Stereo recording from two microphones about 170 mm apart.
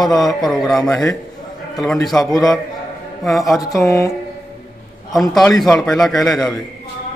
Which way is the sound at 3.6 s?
20° left (ahead or behind).